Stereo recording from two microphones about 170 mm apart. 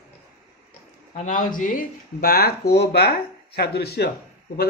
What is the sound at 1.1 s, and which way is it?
Speech, 50° left (ahead or behind).